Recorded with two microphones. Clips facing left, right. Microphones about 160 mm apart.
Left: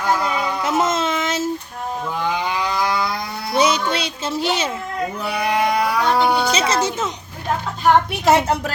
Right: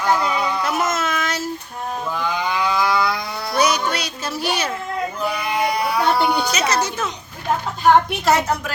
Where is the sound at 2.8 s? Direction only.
45° left (ahead or behind).